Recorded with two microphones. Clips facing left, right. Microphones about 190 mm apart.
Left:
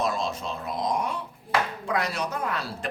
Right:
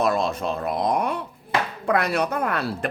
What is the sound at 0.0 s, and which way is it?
Speech, 60° right (ahead or behind).